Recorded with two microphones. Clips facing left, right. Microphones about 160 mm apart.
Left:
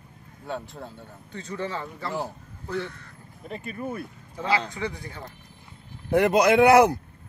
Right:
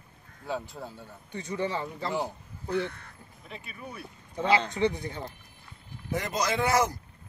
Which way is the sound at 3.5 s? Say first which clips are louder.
Left 10 dB; 45° left (ahead or behind).